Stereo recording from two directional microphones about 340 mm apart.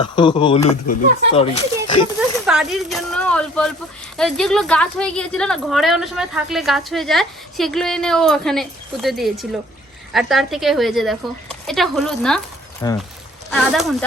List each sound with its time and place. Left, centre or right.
0.0 s speech: centre
2.5 s a woman's voice: centre